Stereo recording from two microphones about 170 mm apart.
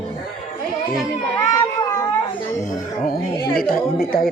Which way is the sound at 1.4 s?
20° left (ahead or behind).